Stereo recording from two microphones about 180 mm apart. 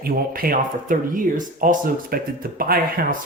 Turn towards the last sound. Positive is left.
turn(degrees=-55)  # may be behind; listen again after turning